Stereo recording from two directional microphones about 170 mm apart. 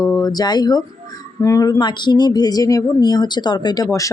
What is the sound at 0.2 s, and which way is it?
Speech, 25° left (ahead or behind).